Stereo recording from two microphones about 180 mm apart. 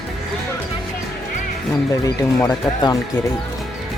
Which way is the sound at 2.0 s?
20° left (ahead or behind).